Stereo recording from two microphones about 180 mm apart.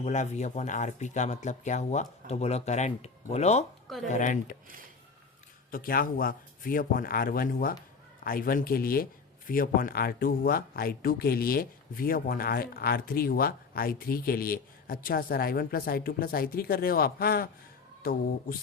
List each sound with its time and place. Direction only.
0.0 s a man's voice: 40° left (ahead or behind)
5.7 s a man's voice: 55° left (ahead or behind)